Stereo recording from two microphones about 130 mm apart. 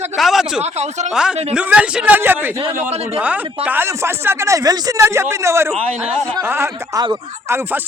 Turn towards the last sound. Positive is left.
turn(degrees=-20)  # may be behind; listen again after turning